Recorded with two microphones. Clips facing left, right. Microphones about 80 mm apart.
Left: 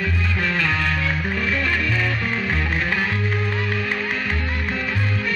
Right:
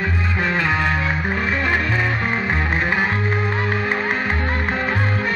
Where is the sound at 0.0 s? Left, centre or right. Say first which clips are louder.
Right 2 dB; right.